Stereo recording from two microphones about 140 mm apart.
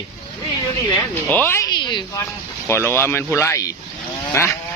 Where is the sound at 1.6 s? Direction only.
30° left (ahead or behind).